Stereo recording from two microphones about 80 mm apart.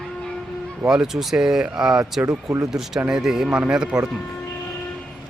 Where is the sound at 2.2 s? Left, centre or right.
Right.